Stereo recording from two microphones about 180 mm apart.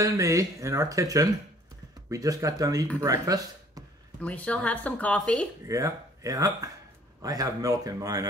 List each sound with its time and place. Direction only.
0.0 s speech: 20° right (ahead or behind)
4.2 s speech: 5° left (ahead or behind)
5.7 s speech: 15° right (ahead or behind)